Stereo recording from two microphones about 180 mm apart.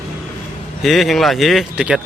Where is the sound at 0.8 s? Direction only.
Centre (ahead or behind).